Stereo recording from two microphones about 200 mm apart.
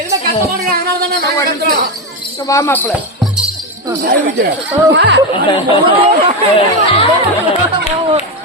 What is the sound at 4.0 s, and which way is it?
Speech, 55° right (ahead or behind).